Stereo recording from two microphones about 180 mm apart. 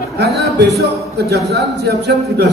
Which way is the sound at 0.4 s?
65° right (ahead or behind).